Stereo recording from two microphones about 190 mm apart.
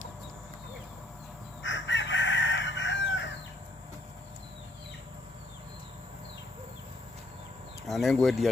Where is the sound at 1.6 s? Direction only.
75° left (ahead or behind).